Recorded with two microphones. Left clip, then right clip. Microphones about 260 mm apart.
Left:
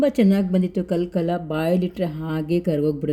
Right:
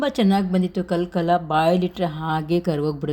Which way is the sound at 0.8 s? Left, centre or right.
Right.